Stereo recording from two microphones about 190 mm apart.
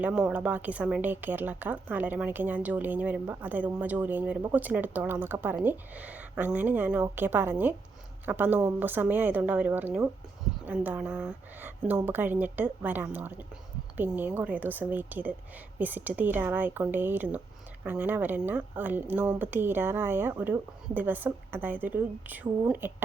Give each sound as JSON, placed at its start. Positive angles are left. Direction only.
{"t": 0.0, "sound": "a woman's voice", "side_deg": -5}